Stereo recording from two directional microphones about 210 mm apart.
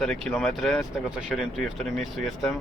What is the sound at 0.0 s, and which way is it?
Speech, centre (ahead or behind).